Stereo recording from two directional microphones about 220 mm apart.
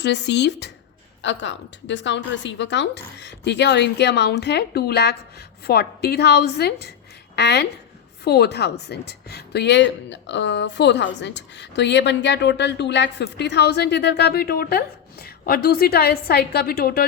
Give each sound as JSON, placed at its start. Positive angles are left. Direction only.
{"t": 0.0, "sound": "speech", "side_deg": 50}